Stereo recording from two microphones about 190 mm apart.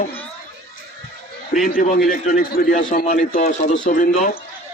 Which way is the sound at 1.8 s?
50° left (ahead or behind).